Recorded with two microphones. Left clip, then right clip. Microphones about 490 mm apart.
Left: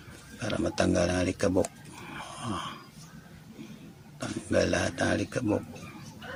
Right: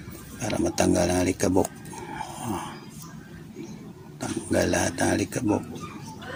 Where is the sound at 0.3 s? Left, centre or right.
Left.